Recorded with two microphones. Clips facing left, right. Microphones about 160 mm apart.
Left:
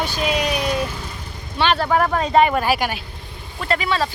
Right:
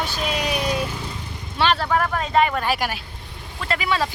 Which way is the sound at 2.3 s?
20° left (ahead or behind).